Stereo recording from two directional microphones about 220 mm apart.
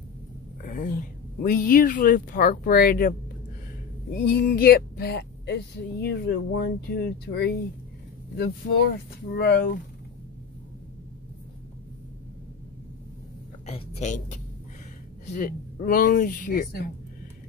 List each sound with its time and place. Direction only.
0.7 s speech: 35° left (ahead or behind)
13.7 s a woman's voice: 30° left (ahead or behind)